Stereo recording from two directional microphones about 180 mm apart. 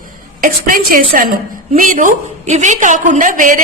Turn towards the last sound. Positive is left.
turn(degrees=-45)  # may be behind; listen again after turning